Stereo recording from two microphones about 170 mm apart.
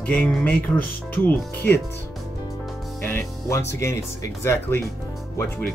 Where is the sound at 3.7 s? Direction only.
15° left (ahead or behind).